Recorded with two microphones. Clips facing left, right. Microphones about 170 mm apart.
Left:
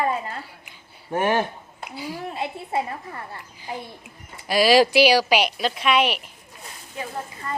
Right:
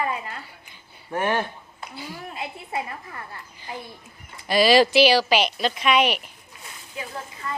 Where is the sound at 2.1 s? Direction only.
30° left (ahead or behind).